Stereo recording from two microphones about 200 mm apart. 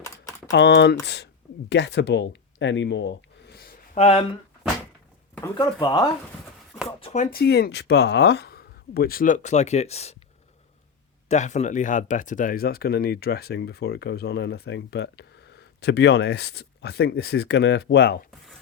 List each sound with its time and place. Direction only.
0.0 s typing: 15° left (ahead or behind)
0.5 s speech: 60° left (ahead or behind)
3.9 s speech: 30° left (ahead or behind)
5.5 s speech: 20° left (ahead or behind)
7.0 s speech: 35° left (ahead or behind)
11.3 s speech: 35° left (ahead or behind); by 18.2 s 60° left (ahead or behind)